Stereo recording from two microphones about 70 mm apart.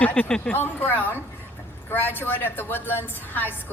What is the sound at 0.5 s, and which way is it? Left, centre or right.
A woman's voice, left.